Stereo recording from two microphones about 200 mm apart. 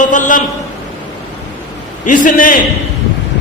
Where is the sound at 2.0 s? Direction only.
40° left (ahead or behind).